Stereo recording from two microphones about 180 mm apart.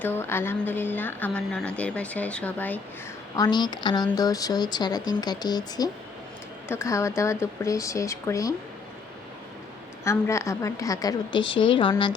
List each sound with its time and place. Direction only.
0.0 s a woman's voice: 10° left (ahead or behind)
3.3 s a woman's voice: 20° left (ahead or behind)
10.0 s speech: 15° left (ahead or behind)